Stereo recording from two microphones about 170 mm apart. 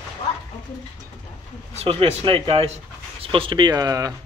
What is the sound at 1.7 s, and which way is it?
Speech, 35° right (ahead or behind).